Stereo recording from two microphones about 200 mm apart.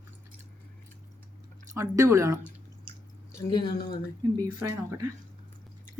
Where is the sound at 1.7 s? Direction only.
15° right (ahead or behind).